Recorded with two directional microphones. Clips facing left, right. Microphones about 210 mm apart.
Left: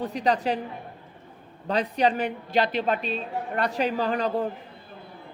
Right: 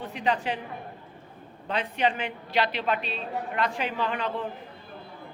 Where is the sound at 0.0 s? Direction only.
40° left (ahead or behind).